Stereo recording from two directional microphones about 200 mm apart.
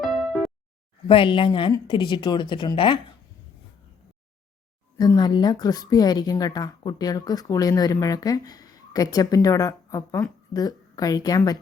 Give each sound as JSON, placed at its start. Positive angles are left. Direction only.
{"t": 0.0, "sound": "music", "side_deg": 0}
{"t": 1.0, "sound": "a woman's voice", "side_deg": 25}
{"t": 4.9, "sound": "a woman's voice", "side_deg": 20}